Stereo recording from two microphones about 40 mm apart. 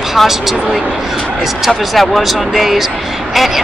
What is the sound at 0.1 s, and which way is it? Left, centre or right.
Speech, centre.